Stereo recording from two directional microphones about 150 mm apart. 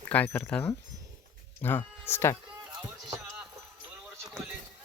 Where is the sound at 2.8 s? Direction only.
20° right (ahead or behind).